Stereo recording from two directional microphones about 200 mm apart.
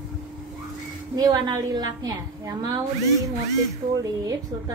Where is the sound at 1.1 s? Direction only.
20° right (ahead or behind).